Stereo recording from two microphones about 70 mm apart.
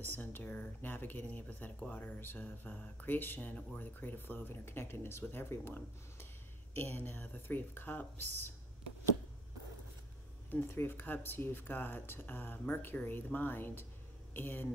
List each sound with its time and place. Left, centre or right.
0.0 s speech: left
10.5 s speech: left